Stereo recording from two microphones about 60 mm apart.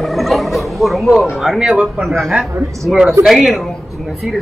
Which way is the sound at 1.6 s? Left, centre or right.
Centre.